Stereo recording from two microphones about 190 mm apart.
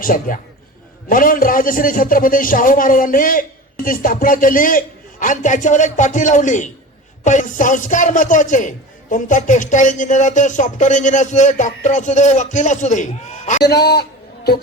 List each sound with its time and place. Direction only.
0.0 s a man's voice: 45° left (ahead or behind)
13.6 s a man's voice: 60° left (ahead or behind)